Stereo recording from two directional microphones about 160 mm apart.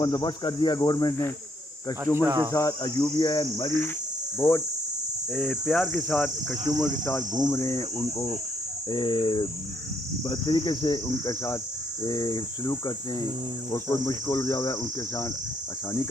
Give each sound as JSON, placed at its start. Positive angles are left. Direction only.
{"t": 0.0, "sound": "cricket", "side_deg": 25}
{"t": 1.9, "sound": "insect", "side_deg": 20}
{"t": 2.2, "sound": "speech", "side_deg": -20}
{"t": 2.5, "sound": "cricket", "side_deg": 20}
{"t": 4.4, "sound": "insect", "side_deg": 15}
{"t": 5.3, "sound": "cricket", "side_deg": 0}
{"t": 7.4, "sound": "insect", "side_deg": 20}
{"t": 8.9, "sound": "cricket", "side_deg": 30}